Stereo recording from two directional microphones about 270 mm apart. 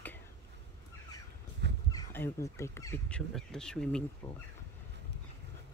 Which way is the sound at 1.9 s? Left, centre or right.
Centre.